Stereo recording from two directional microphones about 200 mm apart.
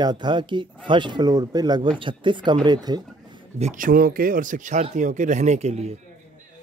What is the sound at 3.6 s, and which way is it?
Speech, 40° right (ahead or behind).